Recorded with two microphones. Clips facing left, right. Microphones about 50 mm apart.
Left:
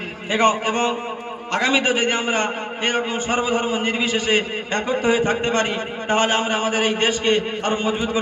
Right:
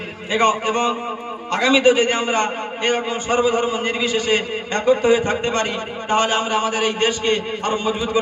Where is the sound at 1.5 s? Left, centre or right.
Left.